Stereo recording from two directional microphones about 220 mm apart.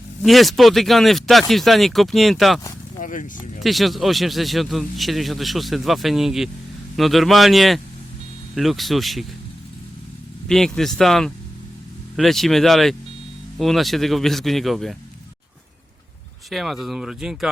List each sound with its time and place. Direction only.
0.2 s speech: centre (ahead or behind)
3.0 s speech: 35° left (ahead or behind)
3.6 s speech: centre (ahead or behind)
10.5 s speech: centre (ahead or behind)
16.5 s speech: centre (ahead or behind)